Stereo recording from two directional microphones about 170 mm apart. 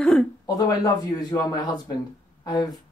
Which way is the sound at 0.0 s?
5° left (ahead or behind).